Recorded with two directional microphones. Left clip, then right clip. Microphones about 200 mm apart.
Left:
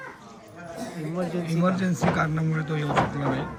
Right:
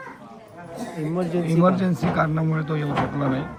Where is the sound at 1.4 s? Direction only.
10° right (ahead or behind).